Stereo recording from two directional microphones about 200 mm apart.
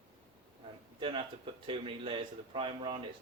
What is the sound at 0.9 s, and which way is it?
Speech, 25° right (ahead or behind).